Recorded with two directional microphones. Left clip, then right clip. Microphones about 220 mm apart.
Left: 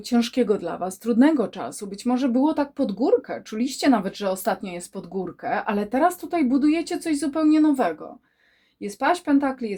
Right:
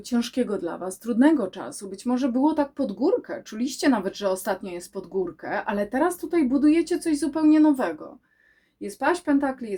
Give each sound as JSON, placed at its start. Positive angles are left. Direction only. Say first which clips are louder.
{"t": 0.1, "sound": "speech", "louder": "left 4 dB", "side_deg": 30}